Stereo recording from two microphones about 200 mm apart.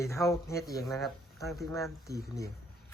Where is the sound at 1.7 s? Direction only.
15° left (ahead or behind).